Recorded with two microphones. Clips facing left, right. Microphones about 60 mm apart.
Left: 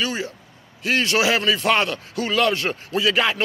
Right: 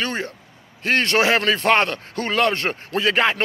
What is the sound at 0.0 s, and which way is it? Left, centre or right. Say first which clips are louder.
Speech: even; right.